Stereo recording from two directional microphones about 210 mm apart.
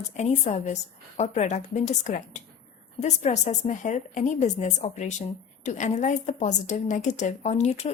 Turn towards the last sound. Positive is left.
turn(degrees=30)  # may be behind; listen again after turning